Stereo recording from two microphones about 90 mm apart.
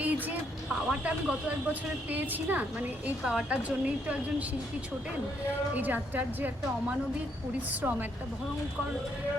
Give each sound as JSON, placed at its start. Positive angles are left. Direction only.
{"t": 0.0, "sound": "a sound", "side_deg": -15}
{"t": 0.9, "sound": "a woman's voice", "side_deg": -10}
{"t": 5.7, "sound": "a woman's voice", "side_deg": -20}
{"t": 7.7, "sound": "a woman's voice", "side_deg": -15}